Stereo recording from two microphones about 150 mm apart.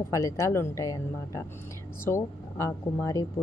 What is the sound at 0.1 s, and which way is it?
A woman's voice, 20° left (ahead or behind).